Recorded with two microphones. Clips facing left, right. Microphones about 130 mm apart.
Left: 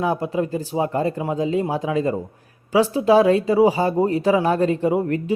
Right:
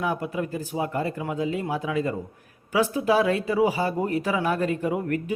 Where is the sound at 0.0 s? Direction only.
35° left (ahead or behind).